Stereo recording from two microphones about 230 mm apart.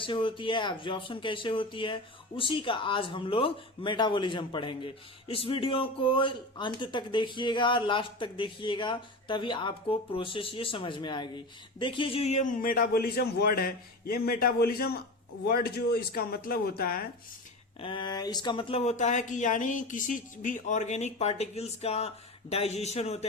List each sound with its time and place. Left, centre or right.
0.0 s speech: left
17.7 s speech: left